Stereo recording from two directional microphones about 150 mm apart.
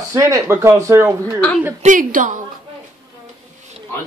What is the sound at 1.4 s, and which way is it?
Speech, 10° left (ahead or behind).